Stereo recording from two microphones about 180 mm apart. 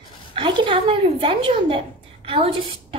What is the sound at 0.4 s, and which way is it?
A woman's voice, 30° right (ahead or behind).